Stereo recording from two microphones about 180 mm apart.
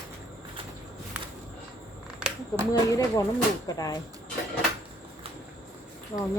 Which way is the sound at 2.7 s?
20° left (ahead or behind).